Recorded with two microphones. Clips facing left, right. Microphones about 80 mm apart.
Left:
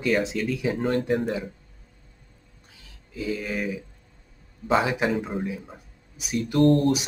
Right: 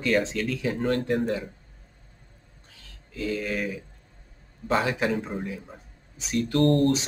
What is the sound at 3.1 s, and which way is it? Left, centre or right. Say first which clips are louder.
Speech: even; centre.